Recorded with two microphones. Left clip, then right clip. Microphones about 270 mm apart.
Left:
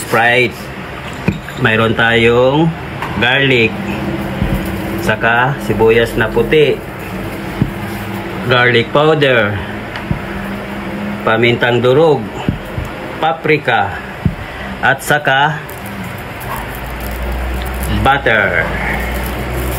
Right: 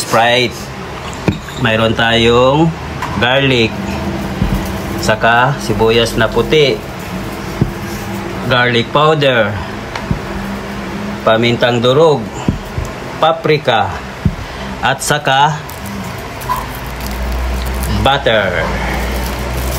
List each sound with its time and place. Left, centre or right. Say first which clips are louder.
0.1 s speech: even; centre
1.6 s speech: left 1 dB; centre
5.0 s speech: right 2 dB; centre
8.5 s speech: left 2 dB; centre
11.2 s speech: right 1 dB; centre
13.2 s speech: right 2 dB; centre
18.0 s speech: even; centre